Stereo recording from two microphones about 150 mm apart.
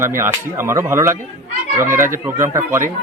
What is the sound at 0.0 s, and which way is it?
Speech, 15° right (ahead or behind).